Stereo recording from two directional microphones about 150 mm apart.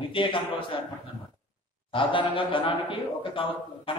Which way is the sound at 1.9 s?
35° left (ahead or behind).